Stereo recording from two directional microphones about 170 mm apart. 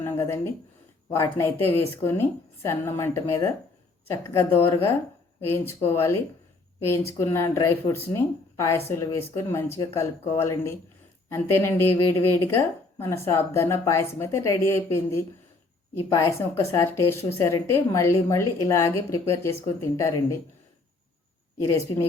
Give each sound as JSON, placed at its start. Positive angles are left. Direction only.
{"t": 0.0, "sound": "a sound", "side_deg": 15}
{"t": 1.1, "sound": "speech", "side_deg": 15}
{"t": 21.6, "sound": "a woman's voice", "side_deg": 20}